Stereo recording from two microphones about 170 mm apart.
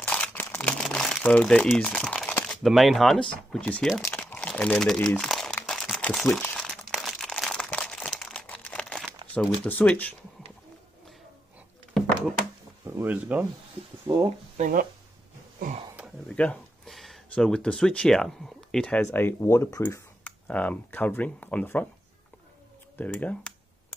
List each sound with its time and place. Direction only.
0.0 s crumpling: 10° left (ahead or behind)
2.6 s speech: centre (ahead or behind)
4.0 s crumpling: 10° left (ahead or behind)
9.3 s speech: 10° left (ahead or behind)
11.9 s a sound: centre (ahead or behind)
12.8 s speech: 10° right (ahead or behind)
14.0 s speech: 30° right (ahead or behind)
14.6 s speech: 55° right (ahead or behind)
16.3 s speech: 5° left (ahead or behind)
22.9 s speech: 10° left (ahead or behind)